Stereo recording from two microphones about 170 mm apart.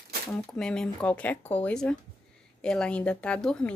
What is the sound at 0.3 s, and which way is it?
A woman's voice, 5° left (ahead or behind).